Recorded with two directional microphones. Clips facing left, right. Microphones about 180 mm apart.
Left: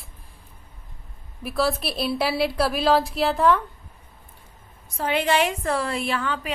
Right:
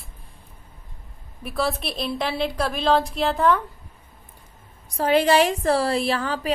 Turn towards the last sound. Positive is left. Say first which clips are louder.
# right 2 dB
turn(degrees=-35)  # may be behind; listen again after turning